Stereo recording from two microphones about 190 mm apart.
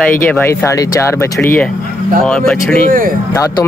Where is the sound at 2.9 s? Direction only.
45° right (ahead or behind).